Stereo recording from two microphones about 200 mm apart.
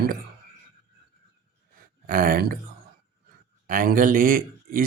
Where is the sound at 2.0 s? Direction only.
45° right (ahead or behind).